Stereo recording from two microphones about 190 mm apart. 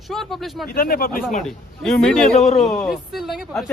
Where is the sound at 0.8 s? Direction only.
50° left (ahead or behind).